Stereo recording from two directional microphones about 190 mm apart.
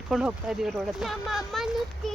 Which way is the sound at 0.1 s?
5° right (ahead or behind).